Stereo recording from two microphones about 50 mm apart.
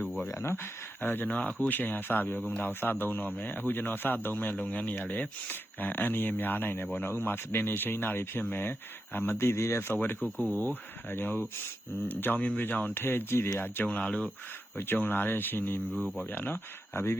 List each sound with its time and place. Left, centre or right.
0.3 s speech: left
1.0 s speech: left
1.3 s speech: left
4.7 s speech: left
5.5 s speech: left
9.4 s speech: left
10.0 s speech: left
12.9 s speech: left
13.8 s speech: left
14.8 s speech: left